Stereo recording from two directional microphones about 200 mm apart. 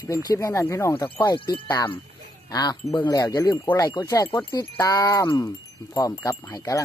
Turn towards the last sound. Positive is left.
turn(degrees=15)  # may be behind; listen again after turning